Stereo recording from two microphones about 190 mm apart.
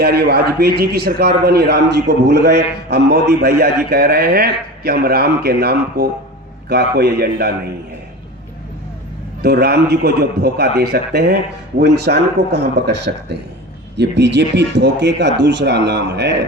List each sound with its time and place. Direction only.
0.0 s a man's voice: 55° right (ahead or behind)
9.4 s a man's voice: 55° right (ahead or behind)